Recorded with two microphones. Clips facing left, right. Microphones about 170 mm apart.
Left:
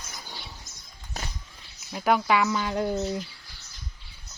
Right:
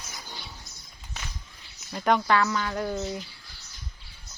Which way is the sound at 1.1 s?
40° left (ahead or behind).